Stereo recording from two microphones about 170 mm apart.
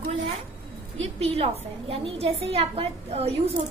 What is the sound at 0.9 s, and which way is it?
A woman's voice, 35° right (ahead or behind).